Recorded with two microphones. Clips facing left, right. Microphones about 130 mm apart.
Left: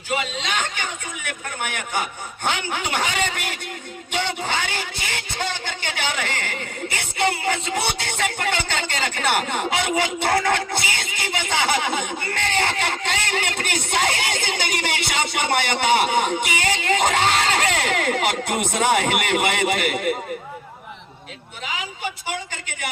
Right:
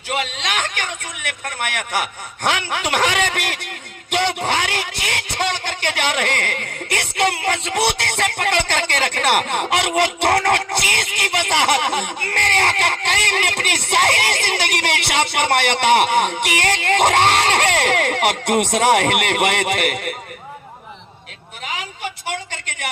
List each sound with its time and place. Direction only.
0.1 s speech: 70° right (ahead or behind)